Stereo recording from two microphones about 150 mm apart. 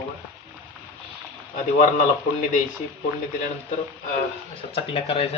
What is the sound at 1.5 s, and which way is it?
A man's voice, 60° left (ahead or behind).